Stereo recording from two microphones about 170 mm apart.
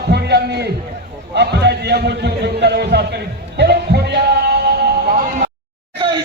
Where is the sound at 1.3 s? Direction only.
80° right.